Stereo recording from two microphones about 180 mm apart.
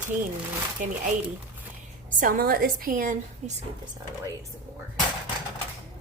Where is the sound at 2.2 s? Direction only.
50° right (ahead or behind).